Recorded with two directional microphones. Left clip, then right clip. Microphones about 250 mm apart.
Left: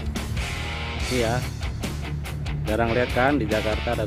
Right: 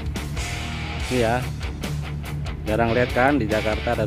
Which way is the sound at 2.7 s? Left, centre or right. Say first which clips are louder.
Right 2 dB; centre.